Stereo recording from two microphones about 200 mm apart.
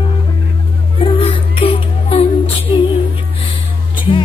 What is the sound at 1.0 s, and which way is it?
Music, 30° left (ahead or behind).